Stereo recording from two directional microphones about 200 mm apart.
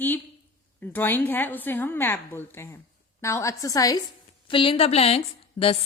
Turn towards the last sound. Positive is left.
turn(degrees=30)  # may be behind; listen again after turning